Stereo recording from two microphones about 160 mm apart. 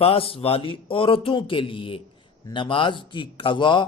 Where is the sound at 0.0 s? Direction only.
35° left (ahead or behind).